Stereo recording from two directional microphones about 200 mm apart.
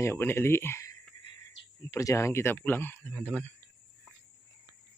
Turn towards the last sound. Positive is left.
turn(degrees=5)  # may be behind; listen again after turning